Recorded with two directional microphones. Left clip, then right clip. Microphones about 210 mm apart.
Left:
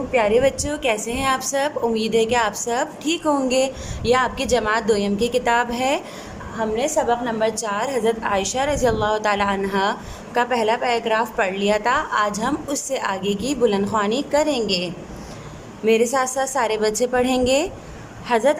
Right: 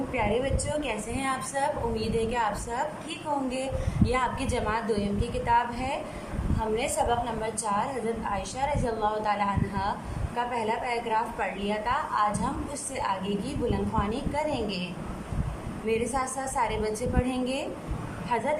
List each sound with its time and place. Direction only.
0.2 s a woman's voice: 55° left (ahead or behind)
6.7 s a woman's voice: 35° left (ahead or behind)
15.9 s a woman's voice: 50° left (ahead or behind)